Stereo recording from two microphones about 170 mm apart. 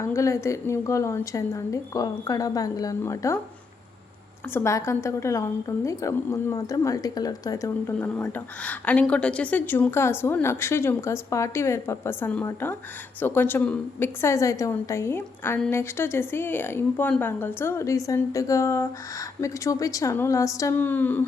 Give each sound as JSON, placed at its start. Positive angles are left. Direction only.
{"t": 0.0, "sound": "a woman's voice", "side_deg": 15}
{"t": 4.5, "sound": "a woman's voice", "side_deg": 15}